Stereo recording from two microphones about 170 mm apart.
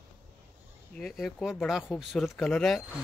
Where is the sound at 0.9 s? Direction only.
Centre (ahead or behind).